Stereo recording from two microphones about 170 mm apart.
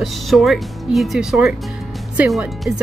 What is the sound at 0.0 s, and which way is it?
Speech, centre (ahead or behind).